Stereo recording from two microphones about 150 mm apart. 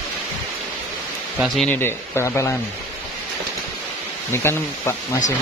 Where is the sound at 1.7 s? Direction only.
15° left (ahead or behind).